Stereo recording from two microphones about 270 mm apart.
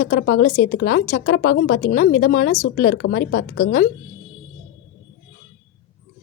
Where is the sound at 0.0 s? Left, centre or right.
Left.